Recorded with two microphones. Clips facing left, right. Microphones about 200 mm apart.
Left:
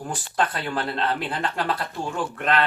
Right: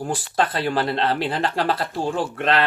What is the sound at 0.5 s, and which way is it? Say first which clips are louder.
Speech: right 5 dB; 30° right (ahead or behind).